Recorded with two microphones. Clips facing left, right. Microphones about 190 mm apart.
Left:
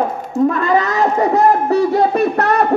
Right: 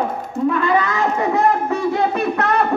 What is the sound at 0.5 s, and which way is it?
Speech, 40° left (ahead or behind).